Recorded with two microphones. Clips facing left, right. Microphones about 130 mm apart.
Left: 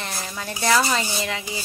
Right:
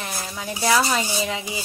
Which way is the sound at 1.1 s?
15° right (ahead or behind).